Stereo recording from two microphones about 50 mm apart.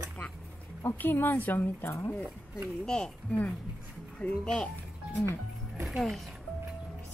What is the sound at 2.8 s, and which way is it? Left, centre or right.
Speech, centre.